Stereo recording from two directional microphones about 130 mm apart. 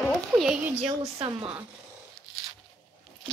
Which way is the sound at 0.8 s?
50° right (ahead or behind).